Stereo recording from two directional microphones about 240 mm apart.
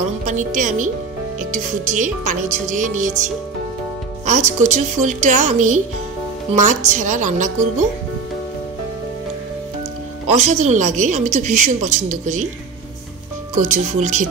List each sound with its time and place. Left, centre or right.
0.3 s speech: right
4.3 s speech: right
10.2 s a woman's voice: right
13.6 s a woman's voice: right